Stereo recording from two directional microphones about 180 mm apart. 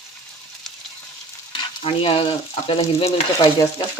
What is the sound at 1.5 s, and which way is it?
Stir, 30° left (ahead or behind).